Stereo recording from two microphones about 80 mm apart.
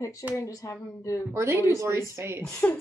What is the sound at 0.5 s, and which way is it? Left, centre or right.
Speech, left.